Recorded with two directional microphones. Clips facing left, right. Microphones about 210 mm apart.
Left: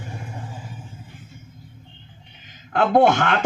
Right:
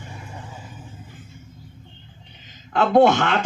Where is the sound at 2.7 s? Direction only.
55° left (ahead or behind).